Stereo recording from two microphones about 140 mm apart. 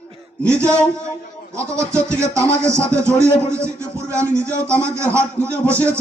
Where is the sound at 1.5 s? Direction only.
20° right (ahead or behind).